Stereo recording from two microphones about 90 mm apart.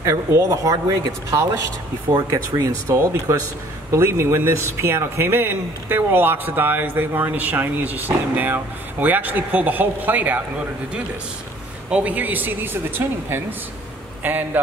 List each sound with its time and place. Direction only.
0.0 s a man's voice: 35° right (ahead or behind); by 10.4 s 20° right (ahead or behind)
11.9 s a man's voice: 15° right (ahead or behind)